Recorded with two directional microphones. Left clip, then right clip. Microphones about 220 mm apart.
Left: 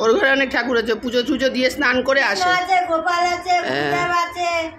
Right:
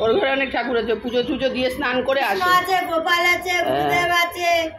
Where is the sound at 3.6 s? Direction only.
20° left (ahead or behind).